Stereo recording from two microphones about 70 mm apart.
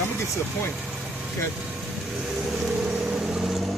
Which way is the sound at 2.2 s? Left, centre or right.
Centre.